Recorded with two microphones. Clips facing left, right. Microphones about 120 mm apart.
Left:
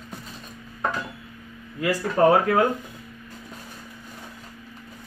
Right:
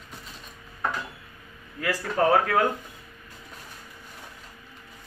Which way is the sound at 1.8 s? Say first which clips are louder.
Left 5 dB; 15° left (ahead or behind).